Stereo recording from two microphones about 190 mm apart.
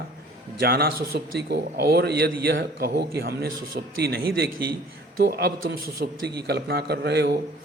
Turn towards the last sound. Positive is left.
turn(degrees=-60)  # may be behind; listen again after turning